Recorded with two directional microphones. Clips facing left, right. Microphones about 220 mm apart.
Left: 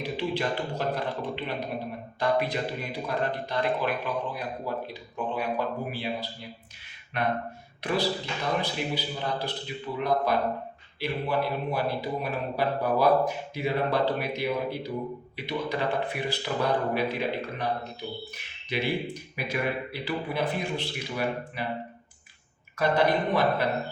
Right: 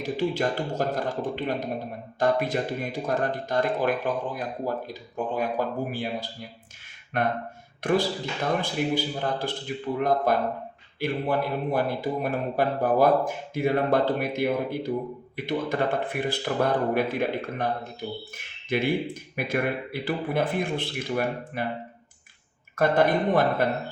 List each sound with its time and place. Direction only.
0.0 s speech: 45° right (ahead or behind)
22.7 s speech: 50° right (ahead or behind)